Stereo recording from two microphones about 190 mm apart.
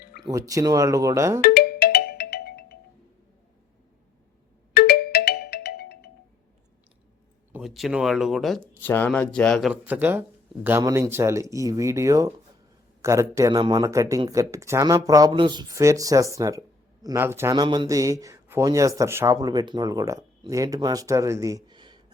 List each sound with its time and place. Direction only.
0.2 s speech: 20° right (ahead or behind)
1.4 s music: 55° left (ahead or behind)
4.7 s ringtone: 55° left (ahead or behind)
7.5 s speech: centre (ahead or behind); by 22.0 s 25° right (ahead or behind)